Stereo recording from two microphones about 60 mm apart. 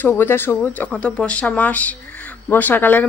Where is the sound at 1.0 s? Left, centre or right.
Centre.